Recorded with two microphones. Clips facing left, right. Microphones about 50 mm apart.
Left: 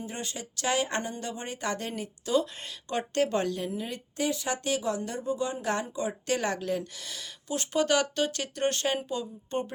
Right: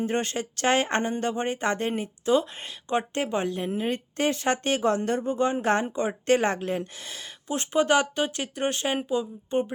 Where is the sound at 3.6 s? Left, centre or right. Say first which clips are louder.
Right 6 dB; right.